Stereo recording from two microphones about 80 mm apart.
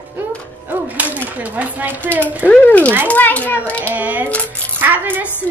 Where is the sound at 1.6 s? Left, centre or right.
Right.